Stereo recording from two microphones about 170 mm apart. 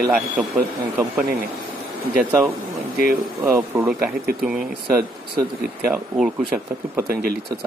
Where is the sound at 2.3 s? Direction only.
15° right (ahead or behind).